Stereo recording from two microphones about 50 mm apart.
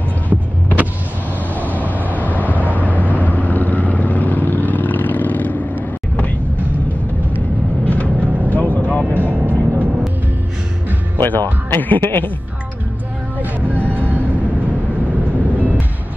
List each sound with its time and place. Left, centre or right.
0.3 s vehicle: right
1.5 s vehicle: left
1.8 s vehicle: right
2.4 s vehicle: left
7.8 s vehicle: left
8.2 s vehicle: right
8.5 s vehicle: left
9.2 s music: right
11.2 s speech: left
13.4 s vehicle: right